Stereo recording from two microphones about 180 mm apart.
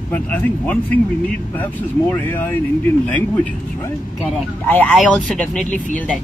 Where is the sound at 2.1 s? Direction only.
10° left (ahead or behind).